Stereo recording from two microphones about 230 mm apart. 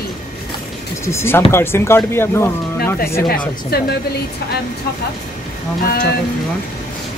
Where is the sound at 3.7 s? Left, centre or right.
Left.